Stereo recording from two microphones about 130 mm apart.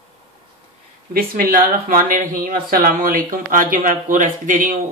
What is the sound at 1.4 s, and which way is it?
Speech, 90° right.